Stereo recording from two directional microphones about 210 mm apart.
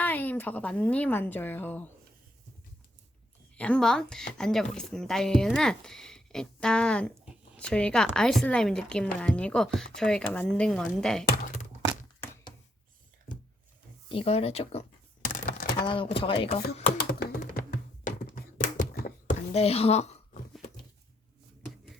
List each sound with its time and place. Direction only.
0.0 s speech: 10° left (ahead or behind)
3.5 s speech: 5° left (ahead or behind)
14.1 s speech: 25° left (ahead or behind)
15.3 s a sound: 40° left (ahead or behind)
15.7 s speech: 25° left (ahead or behind)
17.0 s music: 50° left (ahead or behind); by 20.2 s 30° left (ahead or behind)